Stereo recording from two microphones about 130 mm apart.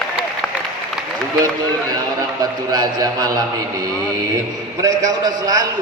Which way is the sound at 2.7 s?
30° right (ahead or behind).